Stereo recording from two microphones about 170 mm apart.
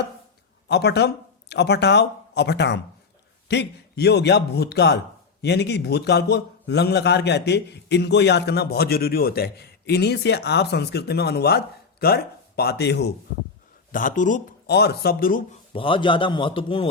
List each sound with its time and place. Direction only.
0.7 s a man's voice: 85° left
13.9 s speech: 50° left (ahead or behind)
14.7 s speech: 70° left (ahead or behind); by 15.4 s 55° left (ahead or behind)
15.7 s a man's voice: 30° left (ahead or behind)